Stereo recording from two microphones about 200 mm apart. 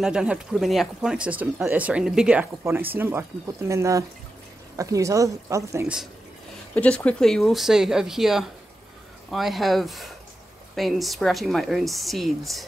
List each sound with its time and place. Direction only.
0.0 s speech: 5° right (ahead or behind)
6.7 s a woman's voice: 5° left (ahead or behind)